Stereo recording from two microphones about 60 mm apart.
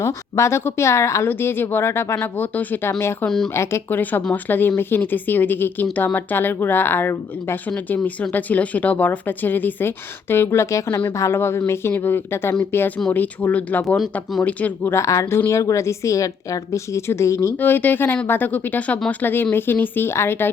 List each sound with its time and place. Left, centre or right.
0.0 s speech: left
1.3 s speech: left
3.2 s speech: centre
3.5 s speech: left
3.8 s speech: left
7.9 s speech: left
13.1 s speech: left
13.8 s speech: centre
15.0 s a woman's voice: left
17.6 s speech: left